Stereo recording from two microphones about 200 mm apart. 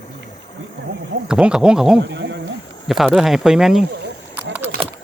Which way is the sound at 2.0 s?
60° right (ahead or behind).